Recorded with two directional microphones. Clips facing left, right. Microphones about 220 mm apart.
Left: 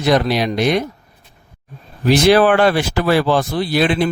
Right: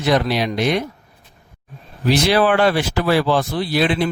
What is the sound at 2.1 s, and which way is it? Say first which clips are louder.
Speech: left 4 dB; 50° left (ahead or behind).